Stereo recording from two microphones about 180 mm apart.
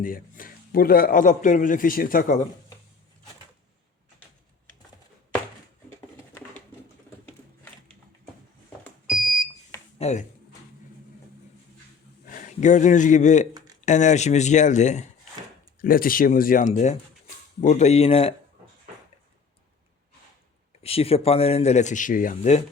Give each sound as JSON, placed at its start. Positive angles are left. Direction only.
{"t": 0.0, "sound": "a man's voice", "side_deg": 50}
{"t": 7.3, "sound": "a sound", "side_deg": 5}
{"t": 8.8, "sound": "smoke detector", "side_deg": 0}
{"t": 10.0, "sound": "speech", "side_deg": 40}
{"t": 12.2, "sound": "speech", "side_deg": 45}
{"t": 15.8, "sound": "a man's voice", "side_deg": 50}
{"t": 20.8, "sound": "speech", "side_deg": 35}